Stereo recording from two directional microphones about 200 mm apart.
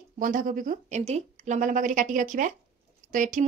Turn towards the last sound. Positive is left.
turn(degrees=-40)  # may be behind; listen again after turning